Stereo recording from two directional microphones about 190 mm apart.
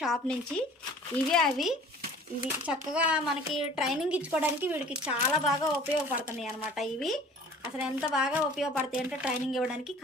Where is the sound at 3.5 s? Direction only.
30° left (ahead or behind).